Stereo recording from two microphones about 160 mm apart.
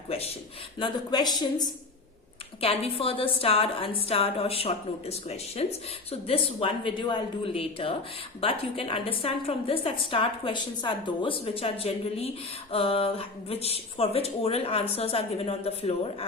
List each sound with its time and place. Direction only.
0.8 s speech: 25° left (ahead or behind)
2.6 s a woman's voice: 35° left (ahead or behind)